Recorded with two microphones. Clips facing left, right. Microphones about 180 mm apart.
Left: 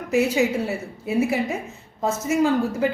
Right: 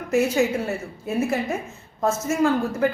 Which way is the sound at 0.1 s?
15° left (ahead or behind).